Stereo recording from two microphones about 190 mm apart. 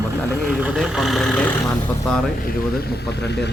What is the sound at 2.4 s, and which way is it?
Speech, 55° left (ahead or behind).